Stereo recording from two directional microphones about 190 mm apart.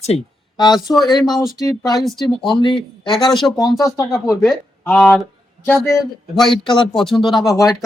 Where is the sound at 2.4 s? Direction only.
25° left (ahead or behind).